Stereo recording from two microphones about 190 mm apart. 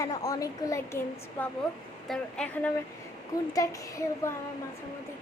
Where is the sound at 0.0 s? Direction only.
15° left (ahead or behind).